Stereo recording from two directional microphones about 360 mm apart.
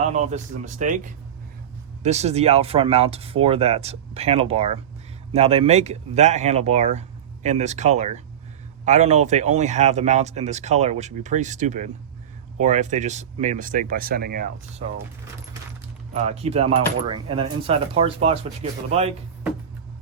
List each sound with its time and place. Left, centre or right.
0.0 s speech: centre
16.1 s speech: centre